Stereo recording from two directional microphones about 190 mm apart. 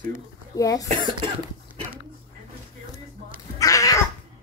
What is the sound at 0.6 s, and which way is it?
Speech, 20° left (ahead or behind).